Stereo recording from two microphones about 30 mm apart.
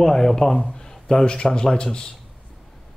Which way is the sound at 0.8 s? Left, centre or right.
Left.